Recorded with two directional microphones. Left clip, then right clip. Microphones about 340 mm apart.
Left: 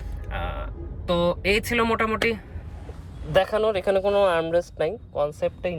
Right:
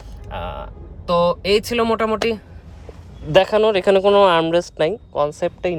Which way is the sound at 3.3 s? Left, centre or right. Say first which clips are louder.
Right 7 dB; right.